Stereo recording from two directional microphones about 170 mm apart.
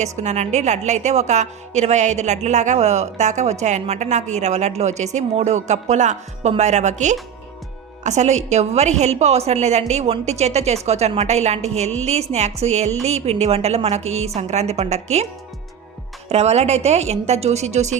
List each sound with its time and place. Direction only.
0.0 s a woman's voice: 40° right (ahead or behind)
16.3 s a woman's voice: 40° right (ahead or behind)